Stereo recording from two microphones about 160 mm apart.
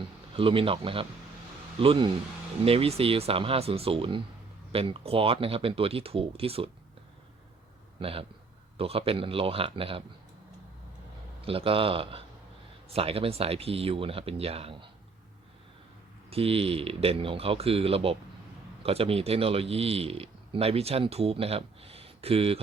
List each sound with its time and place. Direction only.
0.3 s speech: 35° right (ahead or behind)
7.9 s speech: 35° right (ahead or behind)
11.4 s speech: 35° right (ahead or behind)
16.3 s speech: 35° right (ahead or behind)